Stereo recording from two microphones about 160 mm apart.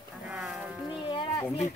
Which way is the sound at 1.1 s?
30° left (ahead or behind).